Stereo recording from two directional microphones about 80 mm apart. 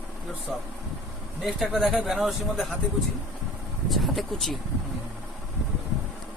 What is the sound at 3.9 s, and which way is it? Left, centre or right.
Speech, centre.